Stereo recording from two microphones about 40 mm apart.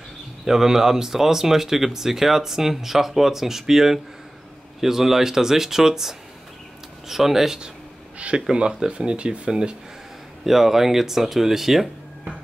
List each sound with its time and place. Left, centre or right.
0.5 s speech: centre
10.4 s speech: centre